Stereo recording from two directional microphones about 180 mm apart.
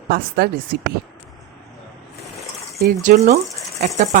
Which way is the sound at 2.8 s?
45° right (ahead or behind).